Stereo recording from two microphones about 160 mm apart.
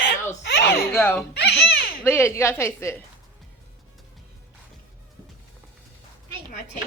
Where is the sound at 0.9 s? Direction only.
10° left (ahead or behind).